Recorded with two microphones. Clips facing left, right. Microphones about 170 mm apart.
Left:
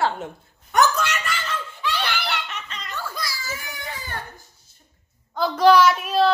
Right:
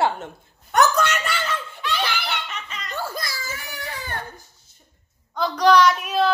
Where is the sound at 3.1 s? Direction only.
50° right (ahead or behind).